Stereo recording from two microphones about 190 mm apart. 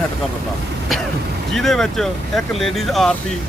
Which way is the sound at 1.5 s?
Centre (ahead or behind).